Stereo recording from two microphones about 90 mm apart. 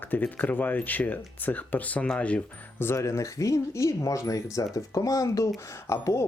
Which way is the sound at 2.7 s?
30° left (ahead or behind).